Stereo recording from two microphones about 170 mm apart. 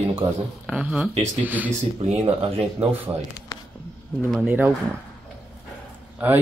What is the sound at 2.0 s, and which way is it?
Speech, 35° right (ahead or behind).